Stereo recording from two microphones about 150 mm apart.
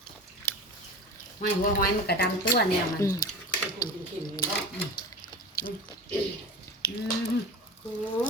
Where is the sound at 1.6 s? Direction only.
85° left.